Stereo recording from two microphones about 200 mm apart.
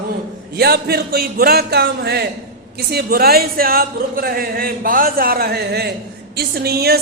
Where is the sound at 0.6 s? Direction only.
50° right (ahead or behind).